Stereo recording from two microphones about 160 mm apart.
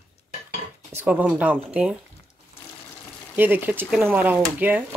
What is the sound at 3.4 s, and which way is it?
Speech, 10° right (ahead or behind).